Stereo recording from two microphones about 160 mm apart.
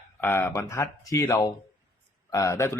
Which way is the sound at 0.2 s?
15° left (ahead or behind).